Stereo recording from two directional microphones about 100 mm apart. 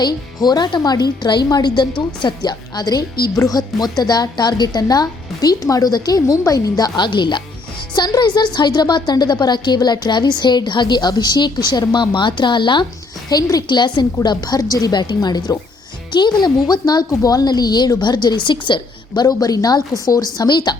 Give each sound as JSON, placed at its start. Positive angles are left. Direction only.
{"t": 0.0, "sound": "a woman's voice", "side_deg": 45}
{"t": 13.3, "sound": "a woman's voice", "side_deg": 40}
{"t": 19.2, "sound": "a woman's voice", "side_deg": 40}